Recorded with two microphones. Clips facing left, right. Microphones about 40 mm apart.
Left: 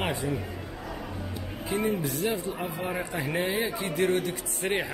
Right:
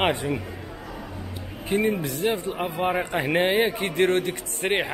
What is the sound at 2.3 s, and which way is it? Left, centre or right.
A man's voice, right.